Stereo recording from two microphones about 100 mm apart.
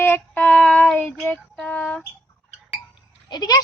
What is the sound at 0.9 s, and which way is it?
Female singing, 10° left (ahead or behind).